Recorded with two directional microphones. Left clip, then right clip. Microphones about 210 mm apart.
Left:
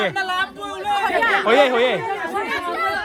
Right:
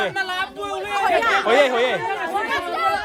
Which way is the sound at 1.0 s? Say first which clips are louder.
Right 1 dB; centre (ahead or behind).